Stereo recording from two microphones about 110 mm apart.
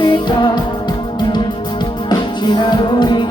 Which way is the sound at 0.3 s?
45° left (ahead or behind).